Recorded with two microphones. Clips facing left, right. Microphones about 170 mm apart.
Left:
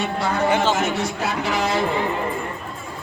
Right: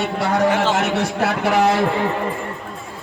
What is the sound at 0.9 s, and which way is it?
Speech, 70° right (ahead or behind).